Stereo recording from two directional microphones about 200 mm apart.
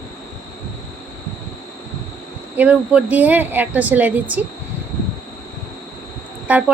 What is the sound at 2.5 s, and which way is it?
Speech, 5° right (ahead or behind).